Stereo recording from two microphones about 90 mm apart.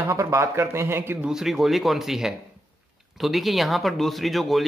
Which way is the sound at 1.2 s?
5° right (ahead or behind).